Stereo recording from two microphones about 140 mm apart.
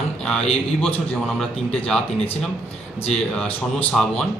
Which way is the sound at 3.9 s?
5° left (ahead or behind).